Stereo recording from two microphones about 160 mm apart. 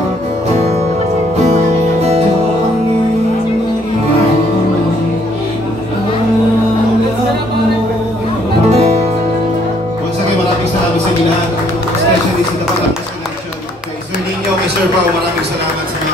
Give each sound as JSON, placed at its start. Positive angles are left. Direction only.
{"t": 8.6, "sound": "music", "side_deg": -40}